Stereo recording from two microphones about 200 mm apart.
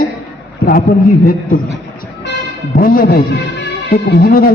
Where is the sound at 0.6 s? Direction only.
50° left (ahead or behind).